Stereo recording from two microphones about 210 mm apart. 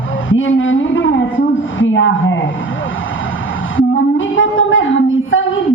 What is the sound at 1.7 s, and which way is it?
Speech, 65° left (ahead or behind).